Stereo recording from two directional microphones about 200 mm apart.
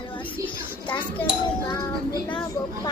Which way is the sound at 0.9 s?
10° left (ahead or behind).